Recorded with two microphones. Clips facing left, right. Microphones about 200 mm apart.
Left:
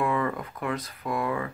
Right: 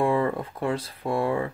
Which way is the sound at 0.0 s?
30° right (ahead or behind).